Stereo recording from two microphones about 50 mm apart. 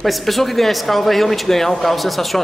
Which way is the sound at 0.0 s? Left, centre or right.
Centre.